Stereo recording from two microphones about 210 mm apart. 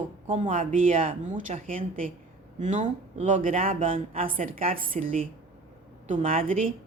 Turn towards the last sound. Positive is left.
turn(degrees=-40)  # may be behind; listen again after turning